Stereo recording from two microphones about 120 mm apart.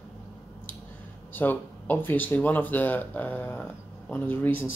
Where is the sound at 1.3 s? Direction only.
15° left (ahead or behind).